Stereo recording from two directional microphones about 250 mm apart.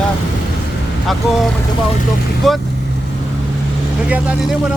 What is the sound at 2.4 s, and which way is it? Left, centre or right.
Speech, centre.